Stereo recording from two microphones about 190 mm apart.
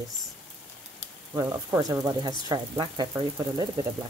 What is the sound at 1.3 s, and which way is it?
Speech, 15° right (ahead or behind).